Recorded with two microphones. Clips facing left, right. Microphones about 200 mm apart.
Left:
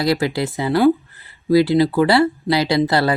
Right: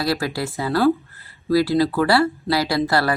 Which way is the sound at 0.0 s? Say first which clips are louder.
Left 4 dB; 20° left (ahead or behind).